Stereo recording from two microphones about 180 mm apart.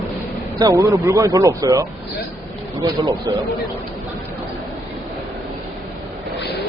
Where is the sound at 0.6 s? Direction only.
15° right (ahead or behind).